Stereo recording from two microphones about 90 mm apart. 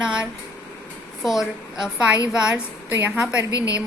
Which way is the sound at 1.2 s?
5° right (ahead or behind).